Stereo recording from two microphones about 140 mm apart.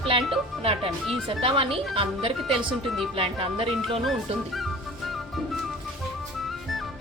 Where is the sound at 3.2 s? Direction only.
40° right (ahead or behind).